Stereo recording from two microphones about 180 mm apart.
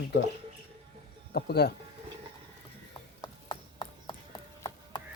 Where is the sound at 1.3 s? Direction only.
65° left (ahead or behind).